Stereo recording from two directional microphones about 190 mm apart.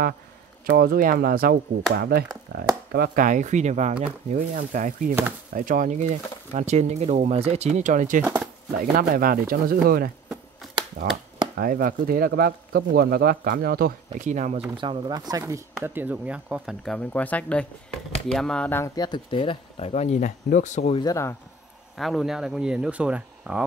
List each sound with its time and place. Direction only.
0.7 s speech: 50° right (ahead or behind)
8.2 s speech: 5° right (ahead or behind)
8.9 s speech: 50° right (ahead or behind)
14.8 s speech: 25° right (ahead or behind); by 21.0 s 35° left (ahead or behind)
21.0 s speech: 15° left (ahead or behind)
21.9 s speech: centre (ahead or behind)